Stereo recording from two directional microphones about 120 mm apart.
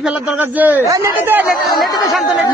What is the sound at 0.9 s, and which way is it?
Speech, 25° right (ahead or behind).